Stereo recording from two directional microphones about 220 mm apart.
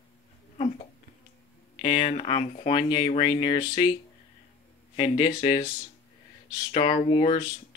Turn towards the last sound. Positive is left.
turn(degrees=25)  # may be behind; listen again after turning